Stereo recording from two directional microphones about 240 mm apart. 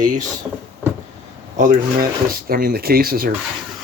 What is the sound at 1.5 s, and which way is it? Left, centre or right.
Speech, right.